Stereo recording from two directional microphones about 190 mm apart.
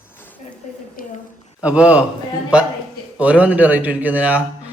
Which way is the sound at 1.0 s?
50° left (ahead or behind).